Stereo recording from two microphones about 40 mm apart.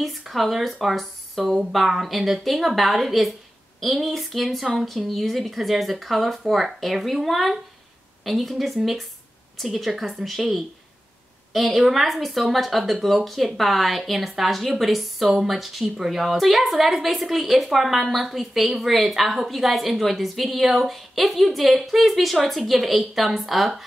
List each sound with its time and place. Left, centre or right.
0.3 s a woman's voice: centre
11.5 s a woman's voice: centre